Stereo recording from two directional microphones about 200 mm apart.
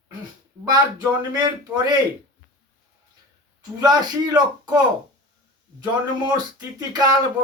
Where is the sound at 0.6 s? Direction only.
20° right (ahead or behind).